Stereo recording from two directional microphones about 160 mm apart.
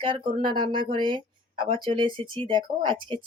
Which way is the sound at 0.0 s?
30° right (ahead or behind).